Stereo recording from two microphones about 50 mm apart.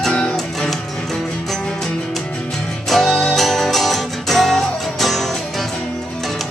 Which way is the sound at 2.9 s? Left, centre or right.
Centre.